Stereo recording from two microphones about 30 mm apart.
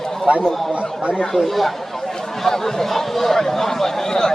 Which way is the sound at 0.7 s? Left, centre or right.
Right.